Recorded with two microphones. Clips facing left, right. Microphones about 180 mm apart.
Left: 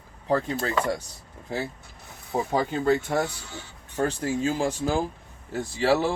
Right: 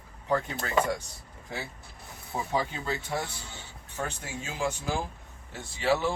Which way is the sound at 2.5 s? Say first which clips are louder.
Left 8 dB; 50° left (ahead or behind).